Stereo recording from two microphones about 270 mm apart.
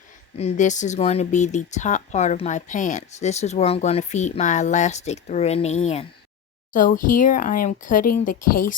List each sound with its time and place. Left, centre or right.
0.3 s speech: left